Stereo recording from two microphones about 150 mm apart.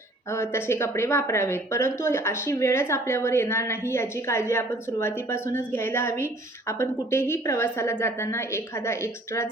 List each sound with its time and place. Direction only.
0.3 s a woman's voice: 15° left (ahead or behind)